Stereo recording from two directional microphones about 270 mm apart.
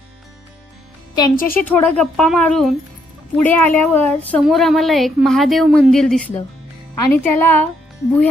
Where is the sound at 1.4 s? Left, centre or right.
Left.